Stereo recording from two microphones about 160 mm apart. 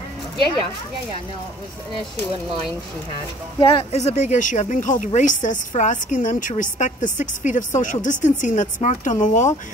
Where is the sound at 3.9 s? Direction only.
45° left (ahead or behind).